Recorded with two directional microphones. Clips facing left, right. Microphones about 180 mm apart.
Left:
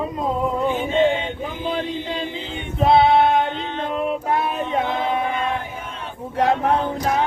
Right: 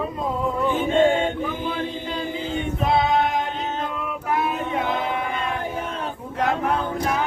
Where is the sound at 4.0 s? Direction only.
25° left (ahead or behind).